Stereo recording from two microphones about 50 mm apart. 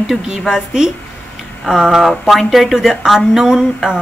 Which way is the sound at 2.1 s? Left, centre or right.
Centre.